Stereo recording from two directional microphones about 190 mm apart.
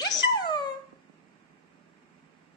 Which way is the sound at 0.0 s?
20° left (ahead or behind).